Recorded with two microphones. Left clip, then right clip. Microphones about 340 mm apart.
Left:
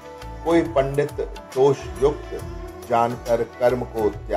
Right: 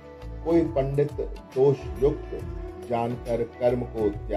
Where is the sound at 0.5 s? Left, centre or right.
Left.